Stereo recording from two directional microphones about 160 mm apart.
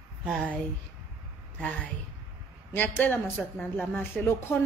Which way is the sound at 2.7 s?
10° left (ahead or behind).